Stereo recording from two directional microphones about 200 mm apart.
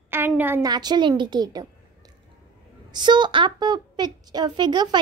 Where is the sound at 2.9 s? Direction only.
20° right (ahead or behind).